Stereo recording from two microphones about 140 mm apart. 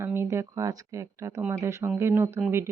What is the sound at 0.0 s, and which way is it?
A woman's voice, 20° right (ahead or behind).